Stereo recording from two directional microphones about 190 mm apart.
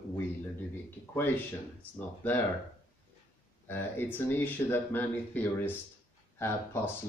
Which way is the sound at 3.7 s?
10° left (ahead or behind).